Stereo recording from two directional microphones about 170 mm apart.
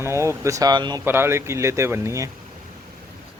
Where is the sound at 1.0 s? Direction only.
15° right (ahead or behind).